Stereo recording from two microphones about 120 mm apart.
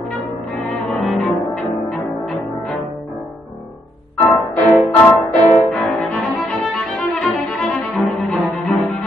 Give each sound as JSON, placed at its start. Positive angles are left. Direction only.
{"t": 0.8, "sound": "music", "side_deg": 0}
{"t": 4.4, "sound": "music", "side_deg": 0}